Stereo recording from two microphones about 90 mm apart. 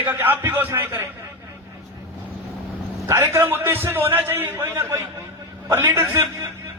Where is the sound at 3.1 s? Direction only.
30° right (ahead or behind).